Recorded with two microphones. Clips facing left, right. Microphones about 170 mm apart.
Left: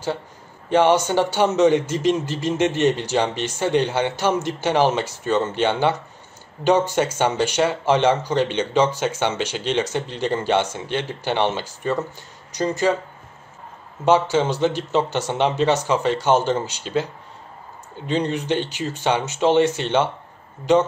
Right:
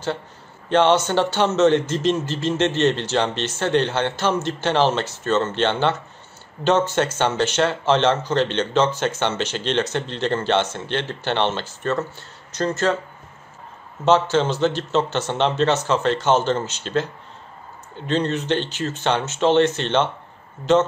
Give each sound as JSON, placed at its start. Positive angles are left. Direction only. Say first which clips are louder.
{"t": 0.7, "sound": "speech", "louder": "even", "side_deg": 10}
{"t": 14.0, "sound": "speech", "louder": "even", "side_deg": 10}